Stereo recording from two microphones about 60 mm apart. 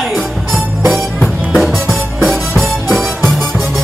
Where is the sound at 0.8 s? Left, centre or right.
Centre.